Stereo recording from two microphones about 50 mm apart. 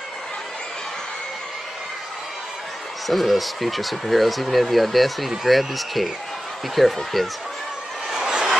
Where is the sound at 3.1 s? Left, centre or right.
Centre.